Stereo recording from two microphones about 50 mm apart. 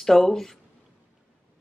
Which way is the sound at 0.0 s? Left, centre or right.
Centre.